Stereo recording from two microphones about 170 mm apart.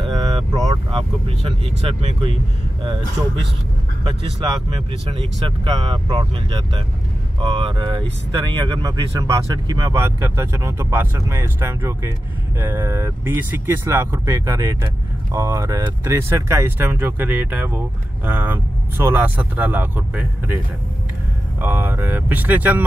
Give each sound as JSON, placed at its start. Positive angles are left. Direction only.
{"t": 0.0, "sound": "speech", "side_deg": -30}
{"t": 4.0, "sound": "speech", "side_deg": -30}
{"t": 5.8, "sound": "speech", "side_deg": -30}